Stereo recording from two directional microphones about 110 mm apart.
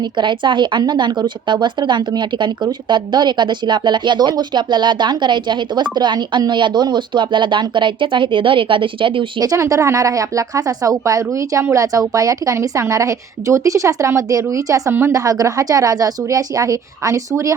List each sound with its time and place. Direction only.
0.0 s a woman's voice: 45° right (ahead or behind)
9.4 s a woman's voice: 35° right (ahead or behind)